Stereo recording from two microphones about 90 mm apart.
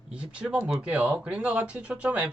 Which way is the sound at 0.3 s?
10° right (ahead or behind).